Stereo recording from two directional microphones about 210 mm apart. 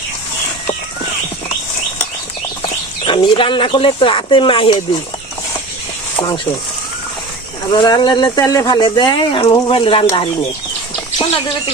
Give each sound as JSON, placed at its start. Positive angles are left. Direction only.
{"t": 2.6, "sound": "speech", "side_deg": 25}
{"t": 7.7, "sound": "speech", "side_deg": 20}